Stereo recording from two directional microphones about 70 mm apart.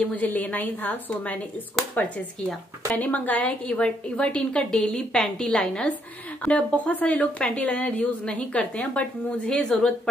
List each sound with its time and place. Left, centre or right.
0.0 s a woman's voice: left; by 9.9 s centre